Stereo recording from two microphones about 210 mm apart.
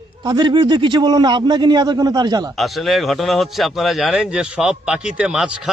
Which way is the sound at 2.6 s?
Centre (ahead or behind).